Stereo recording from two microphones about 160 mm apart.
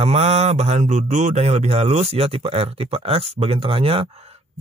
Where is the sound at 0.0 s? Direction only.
45° right (ahead or behind).